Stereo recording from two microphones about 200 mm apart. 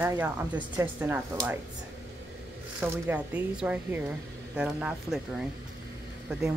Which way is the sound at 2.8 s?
10° right (ahead or behind).